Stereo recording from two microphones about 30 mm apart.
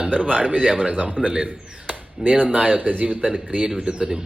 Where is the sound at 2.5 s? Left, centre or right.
Right.